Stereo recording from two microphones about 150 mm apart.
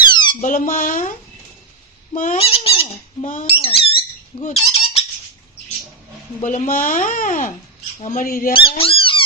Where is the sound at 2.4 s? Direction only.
40° left (ahead or behind).